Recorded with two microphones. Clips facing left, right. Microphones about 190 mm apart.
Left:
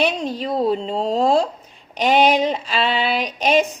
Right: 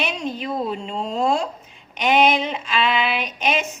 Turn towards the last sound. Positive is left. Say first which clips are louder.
# left 6 dB
turn(degrees=35)  # may be behind; listen again after turning